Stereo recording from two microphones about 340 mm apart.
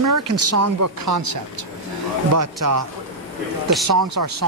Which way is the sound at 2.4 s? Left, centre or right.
Right.